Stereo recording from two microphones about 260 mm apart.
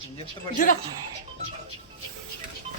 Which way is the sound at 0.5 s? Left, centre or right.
Left.